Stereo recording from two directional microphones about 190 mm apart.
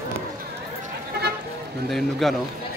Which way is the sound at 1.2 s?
60° right (ahead or behind).